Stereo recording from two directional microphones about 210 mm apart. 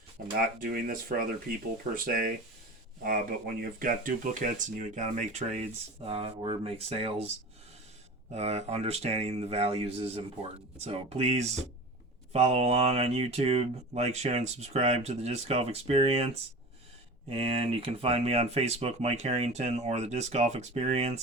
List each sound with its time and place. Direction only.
0.3 s speech: 45° right (ahead or behind)
3.0 s speech: 40° right (ahead or behind)
8.3 s speech: 30° right (ahead or behind)